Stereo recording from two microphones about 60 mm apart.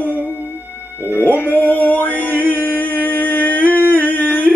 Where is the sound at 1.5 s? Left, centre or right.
Left.